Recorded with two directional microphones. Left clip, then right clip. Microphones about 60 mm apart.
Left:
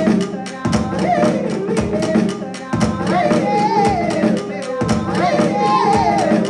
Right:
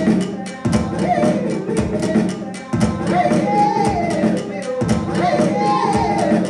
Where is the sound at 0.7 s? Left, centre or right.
Left.